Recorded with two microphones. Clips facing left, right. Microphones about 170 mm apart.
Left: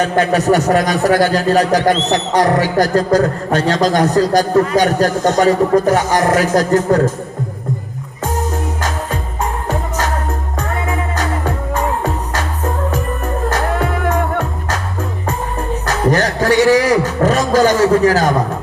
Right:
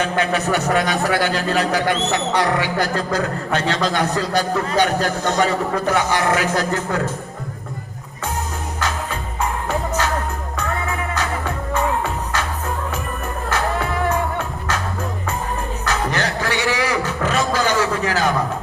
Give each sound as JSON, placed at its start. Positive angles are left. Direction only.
{"t": 0.0, "sound": "speech", "side_deg": 40}
{"t": 11.1, "sound": "music", "side_deg": 40}
{"t": 13.5, "sound": "music", "side_deg": 50}
{"t": 15.9, "sound": "a sound", "side_deg": 40}